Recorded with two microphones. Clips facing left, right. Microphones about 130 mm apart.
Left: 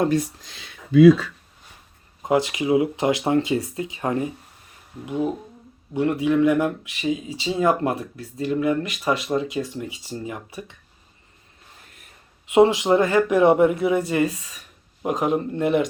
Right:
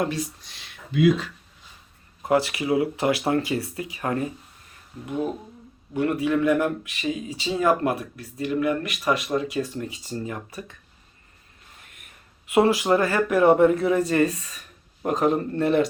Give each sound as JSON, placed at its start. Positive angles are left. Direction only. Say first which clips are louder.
{"t": 2.2, "sound": "speech", "louder": "left 1 dB", "side_deg": 20}
{"t": 11.9, "sound": "a sound", "louder": "left 1 dB", "side_deg": 30}
{"t": 12.5, "sound": "speech", "louder": "left 3 dB", "side_deg": 20}